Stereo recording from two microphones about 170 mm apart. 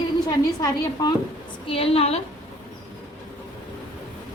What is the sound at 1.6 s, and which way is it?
Speech, 35° left (ahead or behind).